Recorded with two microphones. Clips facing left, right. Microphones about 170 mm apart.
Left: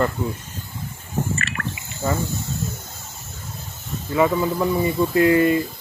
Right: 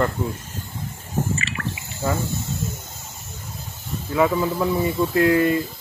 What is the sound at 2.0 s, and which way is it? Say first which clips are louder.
Speech: even; 5° right (ahead or behind).